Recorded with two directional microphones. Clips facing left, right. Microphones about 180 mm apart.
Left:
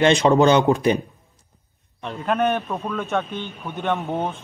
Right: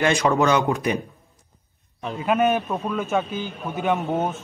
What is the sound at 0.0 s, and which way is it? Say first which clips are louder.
Speech: left 4 dB; 25° left (ahead or behind).